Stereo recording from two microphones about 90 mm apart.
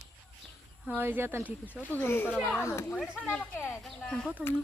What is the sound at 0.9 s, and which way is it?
Speech, 25° right (ahead or behind).